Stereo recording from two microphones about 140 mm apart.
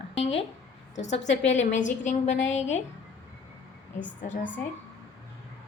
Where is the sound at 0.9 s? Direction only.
55° left (ahead or behind).